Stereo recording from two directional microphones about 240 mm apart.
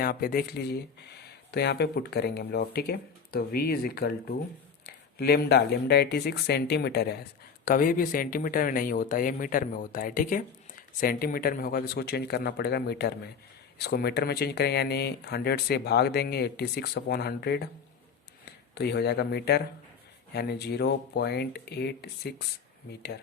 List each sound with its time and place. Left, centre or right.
0.0 s speech: left
18.7 s speech: left